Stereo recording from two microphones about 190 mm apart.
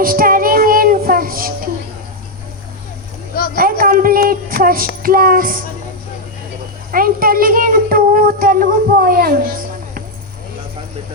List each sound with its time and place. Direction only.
0.0 s child singing: 50° right (ahead or behind)
3.3 s a sound: 50° left (ahead or behind)
3.6 s child singing: 50° right (ahead or behind)
5.0 s music: 50° right (ahead or behind)
6.9 s speech: 50° right (ahead or behind)
9.0 s music: 50° right (ahead or behind)